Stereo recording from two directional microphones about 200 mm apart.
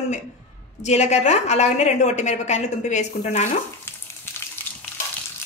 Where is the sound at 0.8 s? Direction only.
35° left (ahead or behind).